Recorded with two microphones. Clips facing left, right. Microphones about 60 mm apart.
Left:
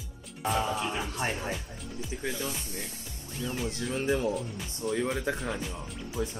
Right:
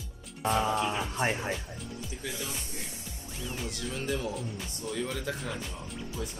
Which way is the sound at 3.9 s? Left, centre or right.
Left.